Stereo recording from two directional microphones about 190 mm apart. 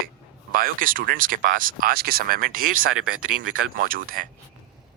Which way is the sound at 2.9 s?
90° right.